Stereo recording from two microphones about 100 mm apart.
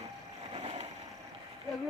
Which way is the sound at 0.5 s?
85° right.